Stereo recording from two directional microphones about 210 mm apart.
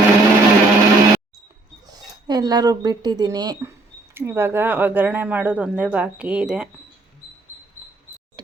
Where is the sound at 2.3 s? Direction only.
20° right (ahead or behind).